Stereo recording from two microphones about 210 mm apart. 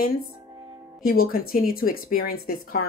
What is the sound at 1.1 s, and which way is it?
Speech, 45° left (ahead or behind).